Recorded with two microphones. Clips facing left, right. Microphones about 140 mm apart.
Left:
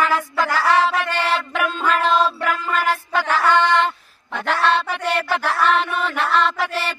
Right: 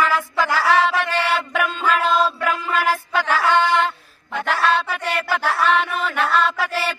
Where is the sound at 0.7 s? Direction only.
35° left (ahead or behind).